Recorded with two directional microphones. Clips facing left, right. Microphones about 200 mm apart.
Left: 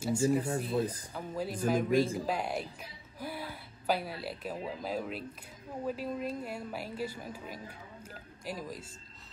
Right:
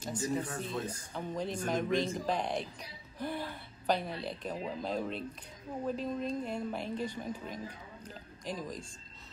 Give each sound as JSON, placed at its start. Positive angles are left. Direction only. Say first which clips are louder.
{"t": 0.0, "sound": "a woman's voice", "louder": "left 6 dB", "side_deg": 10}
{"t": 0.7, "sound": "speech", "louder": "left 7 dB", "side_deg": 35}
{"t": 1.1, "sound": "a woman's voice", "louder": "even", "side_deg": 5}